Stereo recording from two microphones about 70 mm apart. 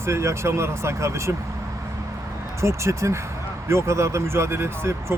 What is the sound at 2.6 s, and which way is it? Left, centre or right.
Speech, right.